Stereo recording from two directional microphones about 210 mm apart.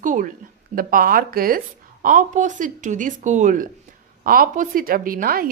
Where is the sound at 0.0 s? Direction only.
40° right (ahead or behind).